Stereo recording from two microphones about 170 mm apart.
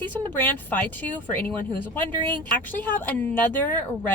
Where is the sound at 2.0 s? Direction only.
25° right (ahead or behind).